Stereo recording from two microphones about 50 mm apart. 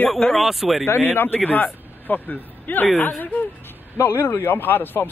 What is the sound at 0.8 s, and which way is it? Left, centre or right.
A man's voice, left.